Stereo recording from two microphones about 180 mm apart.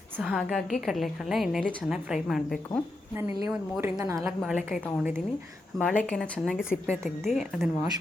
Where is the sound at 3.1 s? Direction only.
10° right (ahead or behind).